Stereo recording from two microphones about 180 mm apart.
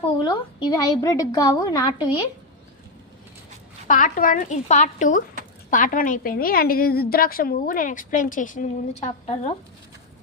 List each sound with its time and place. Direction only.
0.2 s a woman's voice: 25° left (ahead or behind)
3.8 s a woman's voice: 50° left (ahead or behind)